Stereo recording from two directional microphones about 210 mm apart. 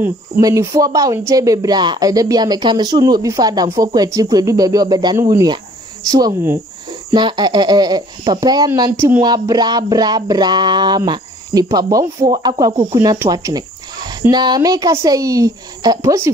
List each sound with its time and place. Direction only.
0.0 s speech: 15° right (ahead or behind)